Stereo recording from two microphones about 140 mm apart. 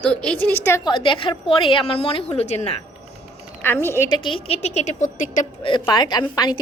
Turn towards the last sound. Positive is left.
turn(degrees=30)  # may be behind; listen again after turning